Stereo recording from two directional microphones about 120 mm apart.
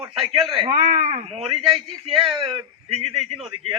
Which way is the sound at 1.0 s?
55° right (ahead or behind).